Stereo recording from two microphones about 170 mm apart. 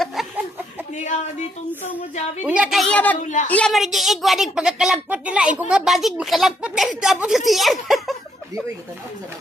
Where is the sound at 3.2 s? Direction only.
45° left (ahead or behind).